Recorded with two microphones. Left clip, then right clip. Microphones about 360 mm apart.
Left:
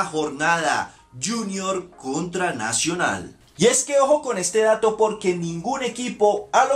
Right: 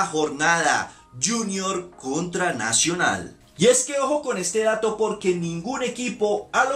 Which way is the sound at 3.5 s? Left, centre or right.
Centre.